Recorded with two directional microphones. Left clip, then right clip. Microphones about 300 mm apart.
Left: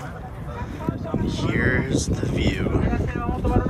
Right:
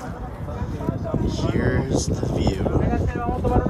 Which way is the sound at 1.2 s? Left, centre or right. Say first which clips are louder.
Left 2 dB; centre.